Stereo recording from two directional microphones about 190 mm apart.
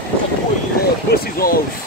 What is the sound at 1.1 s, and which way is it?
Vehicle, 50° left (ahead or behind).